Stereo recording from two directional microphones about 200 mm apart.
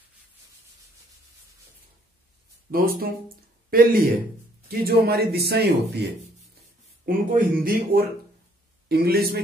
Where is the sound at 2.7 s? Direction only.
45° right (ahead or behind).